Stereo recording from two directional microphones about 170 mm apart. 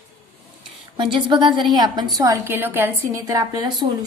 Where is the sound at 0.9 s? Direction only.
25° right (ahead or behind).